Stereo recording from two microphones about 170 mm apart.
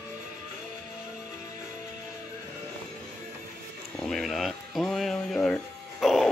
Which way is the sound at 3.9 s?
Centre (ahead or behind).